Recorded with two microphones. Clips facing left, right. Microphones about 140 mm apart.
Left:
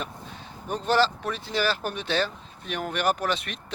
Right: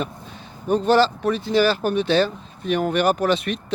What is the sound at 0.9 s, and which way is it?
Speech, 10° right (ahead or behind).